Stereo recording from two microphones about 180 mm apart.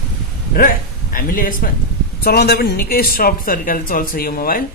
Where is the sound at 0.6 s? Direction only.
50° left (ahead or behind).